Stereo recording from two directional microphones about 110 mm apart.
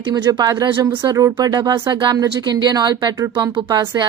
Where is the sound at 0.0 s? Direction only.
45° right (ahead or behind).